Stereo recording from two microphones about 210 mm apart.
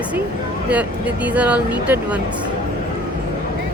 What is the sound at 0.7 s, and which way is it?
Speech, 5° right (ahead or behind).